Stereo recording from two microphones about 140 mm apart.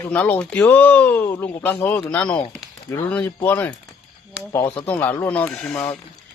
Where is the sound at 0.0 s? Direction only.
10° left (ahead or behind).